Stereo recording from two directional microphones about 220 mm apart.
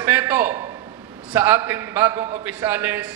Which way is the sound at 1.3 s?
10° right (ahead or behind).